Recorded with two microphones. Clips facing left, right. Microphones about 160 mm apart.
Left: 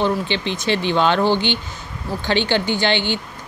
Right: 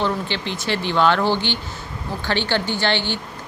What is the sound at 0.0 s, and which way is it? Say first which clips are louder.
A woman's voice: left 3 dB; 20° left (ahead or behind).